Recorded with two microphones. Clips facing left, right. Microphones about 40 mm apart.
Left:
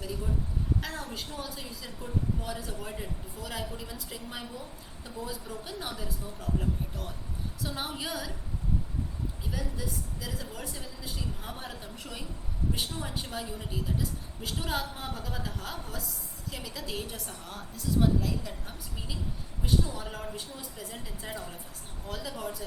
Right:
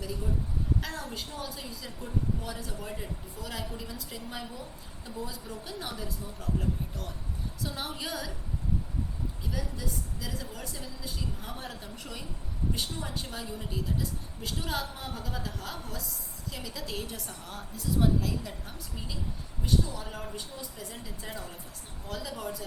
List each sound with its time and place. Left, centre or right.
1.1 s a woman's voice: centre
9.5 s a woman's voice: centre
19.8 s a man's voice: centre
20.1 s a woman's voice: centre